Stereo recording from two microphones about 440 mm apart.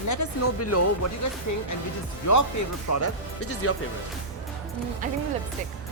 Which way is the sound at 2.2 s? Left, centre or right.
Left.